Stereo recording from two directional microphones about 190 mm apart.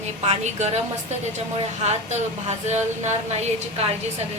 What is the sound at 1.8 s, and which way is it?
A woman's voice, 35° right (ahead or behind).